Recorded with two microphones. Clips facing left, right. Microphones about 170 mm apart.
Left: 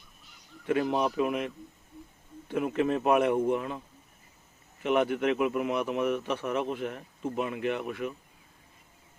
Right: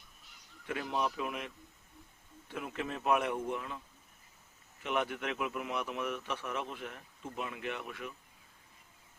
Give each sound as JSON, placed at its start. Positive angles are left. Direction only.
{"t": 0.7, "sound": "speech", "side_deg": 60}
{"t": 2.5, "sound": "a man's voice", "side_deg": 55}